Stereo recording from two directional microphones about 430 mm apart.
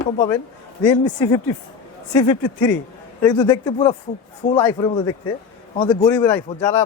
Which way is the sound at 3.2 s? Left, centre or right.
Centre.